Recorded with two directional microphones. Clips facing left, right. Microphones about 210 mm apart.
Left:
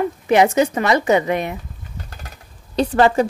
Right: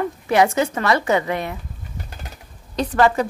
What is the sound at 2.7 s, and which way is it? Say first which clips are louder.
Speech: left 2 dB; 30° left (ahead or behind).